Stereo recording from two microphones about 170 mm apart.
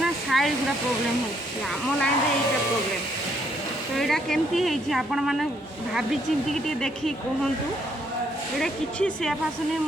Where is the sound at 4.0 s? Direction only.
Centre (ahead or behind).